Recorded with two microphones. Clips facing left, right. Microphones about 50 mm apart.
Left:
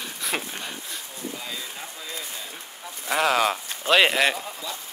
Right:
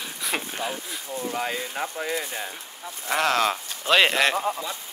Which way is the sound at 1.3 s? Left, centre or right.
Right.